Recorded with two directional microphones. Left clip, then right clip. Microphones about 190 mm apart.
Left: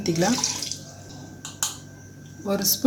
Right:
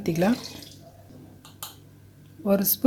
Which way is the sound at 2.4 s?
55° right (ahead or behind).